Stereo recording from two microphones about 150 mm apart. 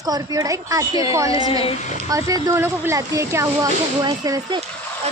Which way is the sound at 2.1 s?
25° right (ahead or behind).